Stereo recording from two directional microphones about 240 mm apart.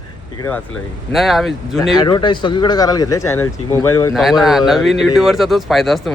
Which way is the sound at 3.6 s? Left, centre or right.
Left.